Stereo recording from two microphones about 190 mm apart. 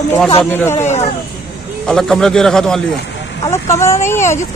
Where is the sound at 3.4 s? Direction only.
15° left (ahead or behind).